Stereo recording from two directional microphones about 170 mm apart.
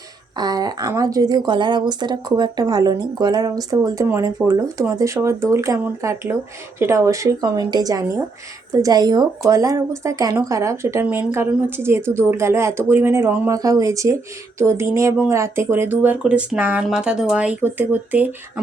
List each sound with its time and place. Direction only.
0.3 s a woman's voice: 25° right (ahead or behind)